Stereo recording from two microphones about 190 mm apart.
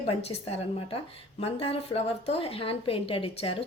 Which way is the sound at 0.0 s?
30° left (ahead or behind).